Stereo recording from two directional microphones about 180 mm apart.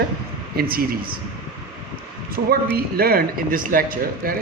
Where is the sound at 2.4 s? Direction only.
65° right (ahead or behind).